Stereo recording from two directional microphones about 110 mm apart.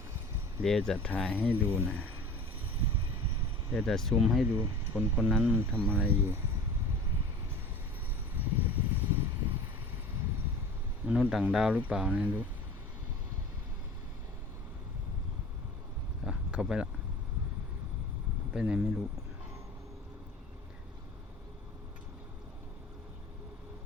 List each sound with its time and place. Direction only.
0.6 s speech: 5° left (ahead or behind)
3.7 s speech: 5° left (ahead or behind)
4.9 s speech: 10° right (ahead or behind)
8.4 s a sound: 15° right (ahead or behind)
11.0 s speech: 15° right (ahead or behind)
16.2 s a sound: 10° right (ahead or behind)
18.5 s speech: 10° right (ahead or behind)